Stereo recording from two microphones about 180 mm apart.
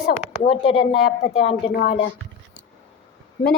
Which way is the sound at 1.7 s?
55° left (ahead or behind).